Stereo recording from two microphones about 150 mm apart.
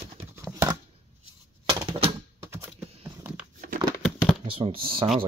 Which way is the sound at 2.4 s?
15° right (ahead or behind).